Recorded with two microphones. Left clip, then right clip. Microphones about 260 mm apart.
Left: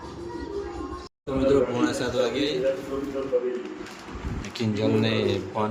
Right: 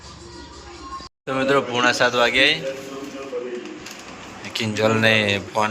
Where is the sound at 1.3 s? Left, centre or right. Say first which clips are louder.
Right 2 dB; centre.